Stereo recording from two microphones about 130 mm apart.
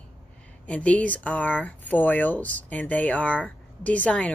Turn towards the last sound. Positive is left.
turn(degrees=10)  # may be behind; listen again after turning